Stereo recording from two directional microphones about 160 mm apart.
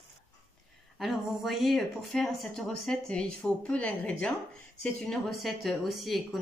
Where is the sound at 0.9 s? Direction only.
Centre (ahead or behind).